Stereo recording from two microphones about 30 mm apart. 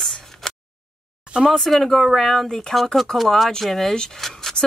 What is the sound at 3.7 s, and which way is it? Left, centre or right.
Speech, centre.